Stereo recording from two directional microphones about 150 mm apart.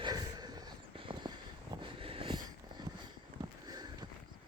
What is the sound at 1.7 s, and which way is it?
Vehicle, 35° right (ahead or behind).